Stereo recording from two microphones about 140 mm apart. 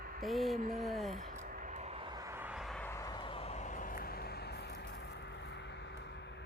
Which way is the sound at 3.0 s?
35° left (ahead or behind).